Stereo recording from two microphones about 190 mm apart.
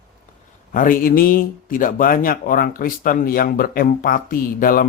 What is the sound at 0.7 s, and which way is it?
Speech, 45° left (ahead or behind).